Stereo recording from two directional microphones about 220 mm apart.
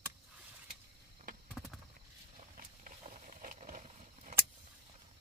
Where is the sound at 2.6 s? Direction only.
35° right (ahead or behind).